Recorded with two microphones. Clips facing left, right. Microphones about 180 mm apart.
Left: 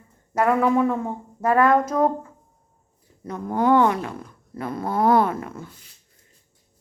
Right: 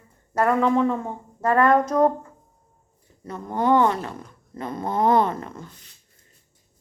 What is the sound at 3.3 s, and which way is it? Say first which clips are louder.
Speech: left 1 dB; 10° left (ahead or behind).